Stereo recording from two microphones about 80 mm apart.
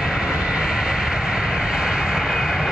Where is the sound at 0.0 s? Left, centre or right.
Centre.